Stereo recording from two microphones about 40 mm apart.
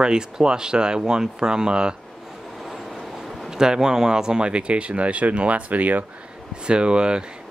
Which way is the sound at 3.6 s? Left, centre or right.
Centre.